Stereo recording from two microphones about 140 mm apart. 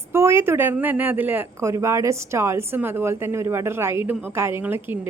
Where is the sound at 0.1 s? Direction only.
20° right (ahead or behind).